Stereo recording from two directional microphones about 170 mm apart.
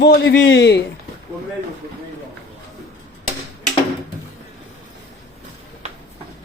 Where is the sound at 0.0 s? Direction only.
75° left (ahead or behind); by 0.8 s 90° left.